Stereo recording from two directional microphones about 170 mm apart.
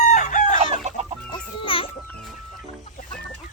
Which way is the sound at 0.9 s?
40° right (ahead or behind).